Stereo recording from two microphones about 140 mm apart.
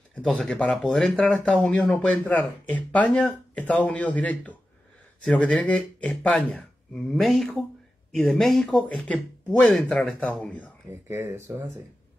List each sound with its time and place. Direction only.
0.1 s speech: 5° left (ahead or behind)
11.1 s speech: 20° right (ahead or behind)